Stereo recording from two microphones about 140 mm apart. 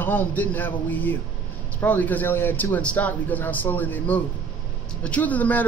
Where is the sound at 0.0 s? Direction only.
15° left (ahead or behind).